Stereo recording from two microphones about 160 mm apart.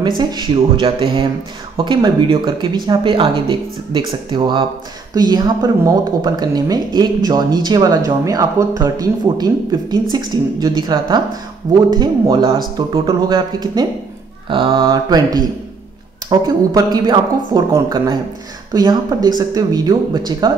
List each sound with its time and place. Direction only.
0.2 s a woman's voice: 30° right (ahead or behind)
14.9 s a woman's voice: 25° right (ahead or behind)